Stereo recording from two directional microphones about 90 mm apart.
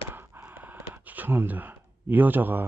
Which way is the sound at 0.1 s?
20° right (ahead or behind).